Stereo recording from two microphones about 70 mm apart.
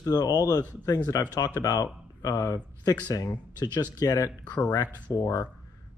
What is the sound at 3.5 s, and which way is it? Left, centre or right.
Speech, left.